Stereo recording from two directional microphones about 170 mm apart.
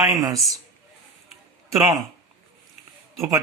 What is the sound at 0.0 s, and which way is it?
Speech, 20° right (ahead or behind).